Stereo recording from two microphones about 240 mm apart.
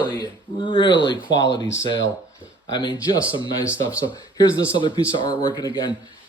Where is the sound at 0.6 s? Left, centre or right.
Centre.